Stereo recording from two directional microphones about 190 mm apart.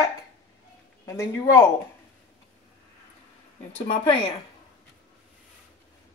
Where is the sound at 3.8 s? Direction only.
25° left (ahead or behind).